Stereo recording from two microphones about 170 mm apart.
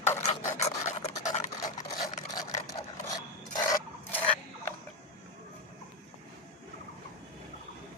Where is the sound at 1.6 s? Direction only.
20° left (ahead or behind).